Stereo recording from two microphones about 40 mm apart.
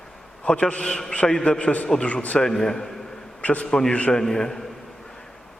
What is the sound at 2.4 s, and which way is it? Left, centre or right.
Speech, centre.